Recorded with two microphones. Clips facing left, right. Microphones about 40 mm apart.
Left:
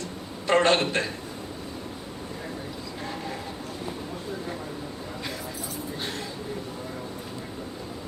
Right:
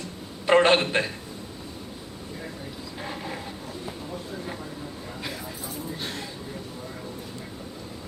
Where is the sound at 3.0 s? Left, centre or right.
Centre.